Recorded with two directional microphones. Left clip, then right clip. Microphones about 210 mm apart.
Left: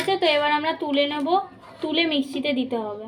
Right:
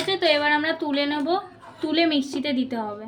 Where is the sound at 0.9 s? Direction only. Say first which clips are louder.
Left 6 dB; 90° right.